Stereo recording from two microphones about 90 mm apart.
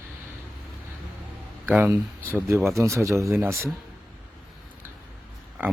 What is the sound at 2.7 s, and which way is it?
Speech, 35° right (ahead or behind).